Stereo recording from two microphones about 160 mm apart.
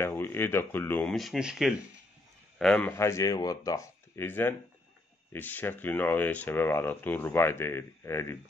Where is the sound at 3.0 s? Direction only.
20° left (ahead or behind).